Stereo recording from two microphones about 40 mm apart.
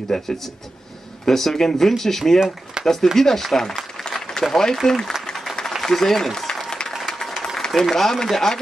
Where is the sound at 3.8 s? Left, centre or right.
Centre.